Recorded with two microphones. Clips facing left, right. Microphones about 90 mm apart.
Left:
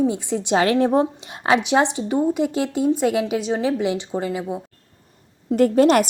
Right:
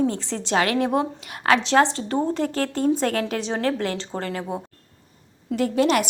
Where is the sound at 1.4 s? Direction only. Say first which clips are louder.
Even; 15° left (ahead or behind).